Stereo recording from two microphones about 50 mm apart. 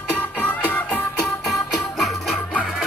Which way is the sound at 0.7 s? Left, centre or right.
Left.